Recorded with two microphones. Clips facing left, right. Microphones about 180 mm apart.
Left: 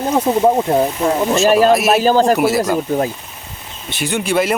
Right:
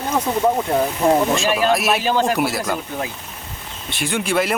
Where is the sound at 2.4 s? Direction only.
Centre (ahead or behind).